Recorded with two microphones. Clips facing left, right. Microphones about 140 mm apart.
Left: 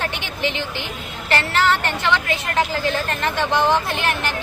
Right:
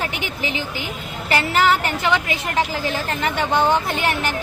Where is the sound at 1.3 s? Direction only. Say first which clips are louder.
Right 1 dB; 10° right (ahead or behind).